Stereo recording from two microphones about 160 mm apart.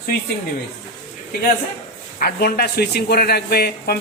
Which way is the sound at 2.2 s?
75° left (ahead or behind).